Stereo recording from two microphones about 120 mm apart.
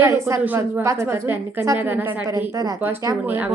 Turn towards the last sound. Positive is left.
turn(degrees=-15)  # may be behind; listen again after turning